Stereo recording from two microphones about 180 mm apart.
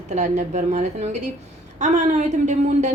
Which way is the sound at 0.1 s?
40° right (ahead or behind).